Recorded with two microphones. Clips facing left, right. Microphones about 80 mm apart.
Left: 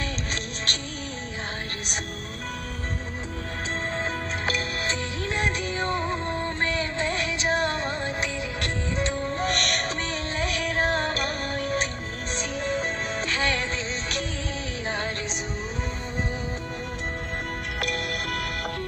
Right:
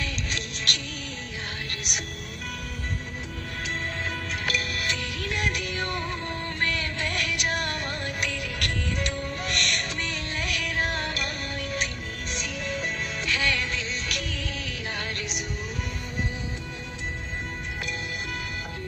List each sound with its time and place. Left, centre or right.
0.0 s music: left
4.5 s music: left
17.7 s music: left